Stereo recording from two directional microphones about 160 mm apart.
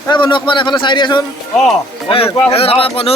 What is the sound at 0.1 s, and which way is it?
A man's voice, 30° left (ahead or behind).